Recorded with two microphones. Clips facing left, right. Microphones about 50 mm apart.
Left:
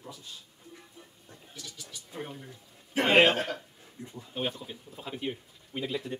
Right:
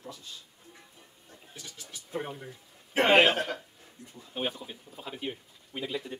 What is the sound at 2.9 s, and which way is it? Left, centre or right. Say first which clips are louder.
Speech: right 2 dB; right.